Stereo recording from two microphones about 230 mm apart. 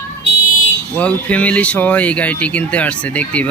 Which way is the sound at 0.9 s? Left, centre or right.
Centre.